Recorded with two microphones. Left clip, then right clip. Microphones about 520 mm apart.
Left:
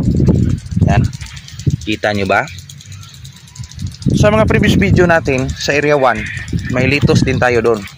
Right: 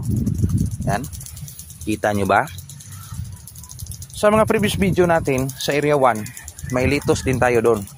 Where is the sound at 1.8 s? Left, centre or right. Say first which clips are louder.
Left 4 dB; right.